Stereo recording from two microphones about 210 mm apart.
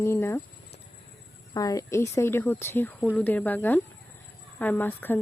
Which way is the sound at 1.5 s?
15° left (ahead or behind).